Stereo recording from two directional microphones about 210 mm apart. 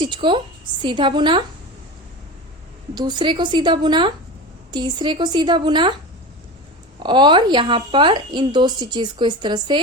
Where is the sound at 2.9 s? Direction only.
20° right (ahead or behind).